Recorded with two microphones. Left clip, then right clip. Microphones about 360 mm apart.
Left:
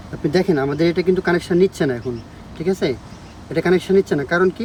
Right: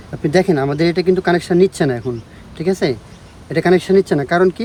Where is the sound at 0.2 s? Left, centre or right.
Centre.